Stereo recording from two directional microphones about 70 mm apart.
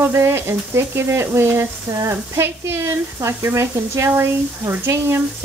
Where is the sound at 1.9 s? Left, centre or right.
Right.